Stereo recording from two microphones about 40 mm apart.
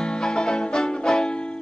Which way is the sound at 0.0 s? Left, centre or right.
Centre.